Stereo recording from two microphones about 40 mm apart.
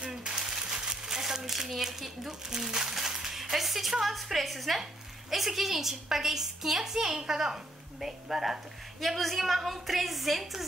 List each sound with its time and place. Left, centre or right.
0.1 s crumpling: centre
4.0 s a woman's voice: centre